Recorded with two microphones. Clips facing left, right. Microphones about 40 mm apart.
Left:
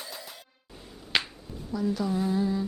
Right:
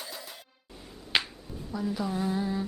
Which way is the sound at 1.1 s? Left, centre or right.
Centre.